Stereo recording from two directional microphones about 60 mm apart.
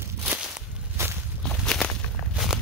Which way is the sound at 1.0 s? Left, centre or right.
Right.